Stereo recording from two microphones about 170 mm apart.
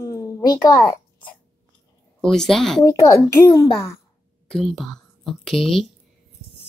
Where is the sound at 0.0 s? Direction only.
20° left (ahead or behind).